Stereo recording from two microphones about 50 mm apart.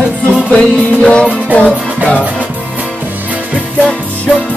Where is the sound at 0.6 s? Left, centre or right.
Centre.